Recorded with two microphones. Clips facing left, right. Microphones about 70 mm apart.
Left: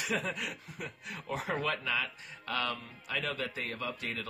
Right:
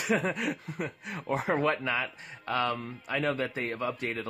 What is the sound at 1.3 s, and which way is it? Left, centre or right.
Speech, right.